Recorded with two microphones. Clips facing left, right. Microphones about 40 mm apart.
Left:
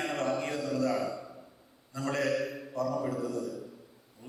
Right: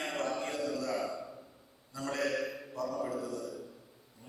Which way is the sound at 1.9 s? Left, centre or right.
Left.